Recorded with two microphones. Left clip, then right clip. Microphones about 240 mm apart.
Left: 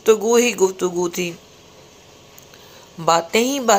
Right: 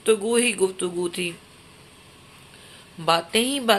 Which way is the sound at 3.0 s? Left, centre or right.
Centre.